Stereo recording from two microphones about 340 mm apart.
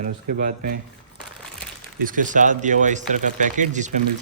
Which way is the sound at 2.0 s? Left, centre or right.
Right.